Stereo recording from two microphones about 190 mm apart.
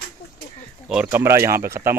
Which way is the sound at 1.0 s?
15° right (ahead or behind).